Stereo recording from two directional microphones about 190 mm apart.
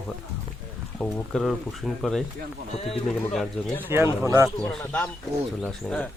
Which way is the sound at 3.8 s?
10° right (ahead or behind).